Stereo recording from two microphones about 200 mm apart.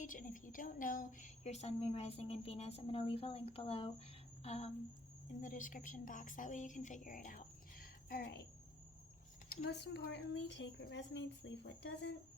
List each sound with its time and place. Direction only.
0.0 s a woman's voice: 40° left (ahead or behind)
9.6 s a woman's voice: 55° left (ahead or behind)